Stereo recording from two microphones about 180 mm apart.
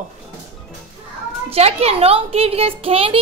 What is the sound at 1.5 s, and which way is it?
A child's voice, 35° right (ahead or behind).